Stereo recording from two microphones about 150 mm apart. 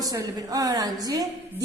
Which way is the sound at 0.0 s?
25° right (ahead or behind).